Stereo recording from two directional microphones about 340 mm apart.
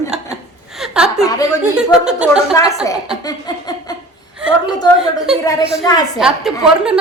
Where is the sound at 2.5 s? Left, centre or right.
Centre.